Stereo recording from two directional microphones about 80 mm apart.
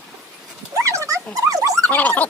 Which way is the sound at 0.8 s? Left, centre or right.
Right.